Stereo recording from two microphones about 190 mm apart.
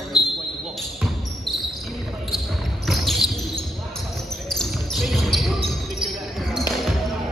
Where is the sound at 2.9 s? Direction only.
Centre (ahead or behind).